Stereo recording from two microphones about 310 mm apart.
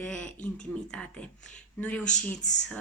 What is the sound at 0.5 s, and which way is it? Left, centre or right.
A woman's voice, centre.